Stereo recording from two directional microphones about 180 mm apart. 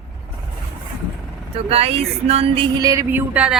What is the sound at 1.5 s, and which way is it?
Speech, 35° right (ahead or behind).